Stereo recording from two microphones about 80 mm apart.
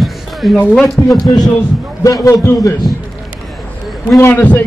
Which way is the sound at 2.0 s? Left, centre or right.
Left.